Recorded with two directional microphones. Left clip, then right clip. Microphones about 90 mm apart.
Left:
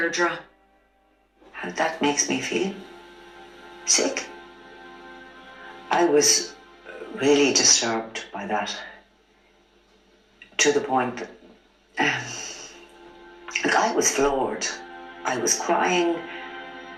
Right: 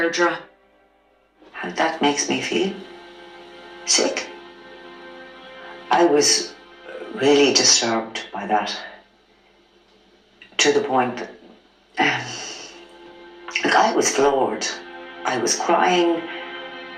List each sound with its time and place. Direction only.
1.5 s a man's voice: 30° right (ahead or behind)
3.5 s music: 30° right (ahead or behind)
5.6 s music: 25° right (ahead or behind)
7.0 s a man's voice: 30° right (ahead or behind)
10.6 s speech: 30° right (ahead or behind)
13.4 s speech: 30° right (ahead or behind)
16.2 s music: 25° right (ahead or behind)